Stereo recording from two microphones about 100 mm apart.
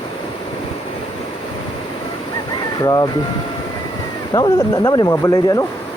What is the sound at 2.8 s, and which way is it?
Speech, 40° left (ahead or behind).